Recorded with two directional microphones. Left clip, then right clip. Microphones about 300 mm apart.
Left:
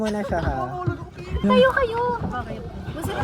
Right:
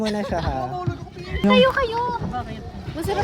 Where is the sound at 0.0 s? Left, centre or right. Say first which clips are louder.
Even; right.